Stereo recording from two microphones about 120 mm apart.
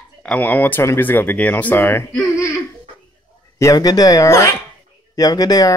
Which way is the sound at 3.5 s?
30° left (ahead or behind).